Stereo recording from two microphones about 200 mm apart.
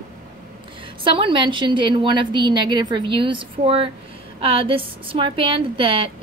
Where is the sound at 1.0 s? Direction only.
25° right (ahead or behind).